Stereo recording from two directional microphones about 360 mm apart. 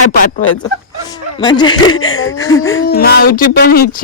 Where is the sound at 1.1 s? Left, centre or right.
Centre.